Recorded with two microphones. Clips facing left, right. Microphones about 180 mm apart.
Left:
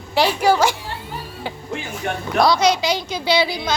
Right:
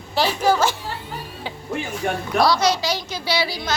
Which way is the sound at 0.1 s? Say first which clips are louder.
Left 2 dB; 15° left (ahead or behind).